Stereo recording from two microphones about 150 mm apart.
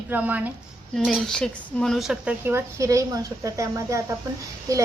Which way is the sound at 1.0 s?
Centre (ahead or behind).